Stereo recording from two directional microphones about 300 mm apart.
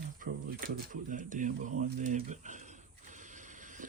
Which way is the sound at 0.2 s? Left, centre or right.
Right.